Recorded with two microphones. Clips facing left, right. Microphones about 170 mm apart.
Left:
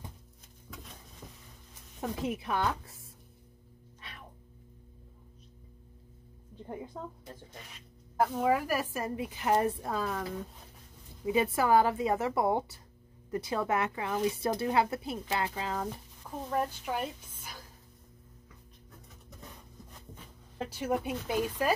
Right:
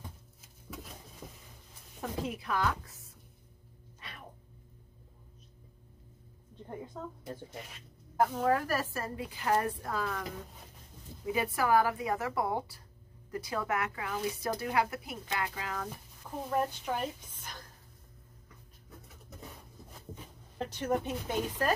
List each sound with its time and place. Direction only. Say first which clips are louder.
0.7 s a sound: right 3 dB; 5° right (ahead or behind)
2.0 s speech: left 3 dB; 20° left (ahead or behind)
6.5 s a sound: left 2 dB; 5° left (ahead or behind)
8.2 s a woman's voice: left 1 dB; 5° left (ahead or behind); by 10.2 s 20° left (ahead or behind)
11.2 s a woman's voice: left 3 dB; 25° left (ahead or behind)
16.2 s speech: right 1 dB; centre (ahead or behind)
20.5 s speech: even; 5° left (ahead or behind)